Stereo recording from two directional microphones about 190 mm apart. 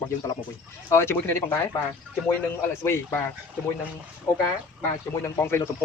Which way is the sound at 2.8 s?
15° left (ahead or behind).